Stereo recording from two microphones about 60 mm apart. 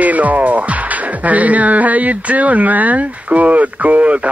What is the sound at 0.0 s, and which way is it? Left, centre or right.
Music, right.